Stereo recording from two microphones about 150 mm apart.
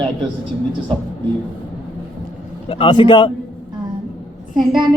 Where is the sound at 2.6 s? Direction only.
35° left (ahead or behind).